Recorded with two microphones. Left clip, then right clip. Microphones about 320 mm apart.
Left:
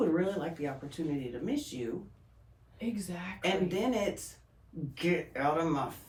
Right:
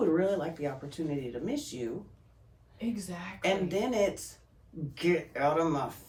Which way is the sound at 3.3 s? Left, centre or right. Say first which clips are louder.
Right 2 dB; centre.